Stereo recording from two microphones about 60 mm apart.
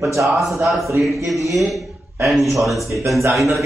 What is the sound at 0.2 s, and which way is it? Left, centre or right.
Speech, centre.